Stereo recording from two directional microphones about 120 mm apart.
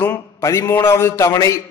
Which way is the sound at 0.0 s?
25° left (ahead or behind).